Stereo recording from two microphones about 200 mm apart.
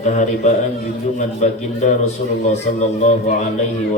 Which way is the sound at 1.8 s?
35° left (ahead or behind).